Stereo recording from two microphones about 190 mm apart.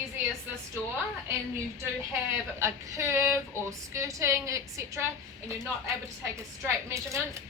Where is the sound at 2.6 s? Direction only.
15° right (ahead or behind).